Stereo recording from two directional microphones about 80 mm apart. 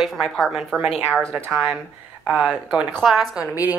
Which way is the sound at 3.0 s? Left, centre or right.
Centre.